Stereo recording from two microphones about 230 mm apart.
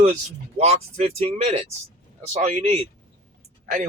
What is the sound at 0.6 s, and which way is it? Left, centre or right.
Speech, right.